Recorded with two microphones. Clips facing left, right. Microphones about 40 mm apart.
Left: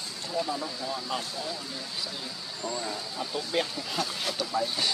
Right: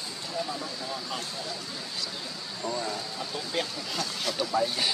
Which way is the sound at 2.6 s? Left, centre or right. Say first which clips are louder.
Right 2 dB; centre.